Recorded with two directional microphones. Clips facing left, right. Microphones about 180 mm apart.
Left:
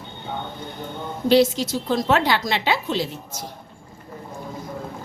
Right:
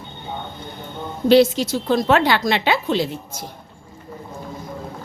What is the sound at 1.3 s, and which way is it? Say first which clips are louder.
Speech: right 3 dB; 65° right (ahead or behind).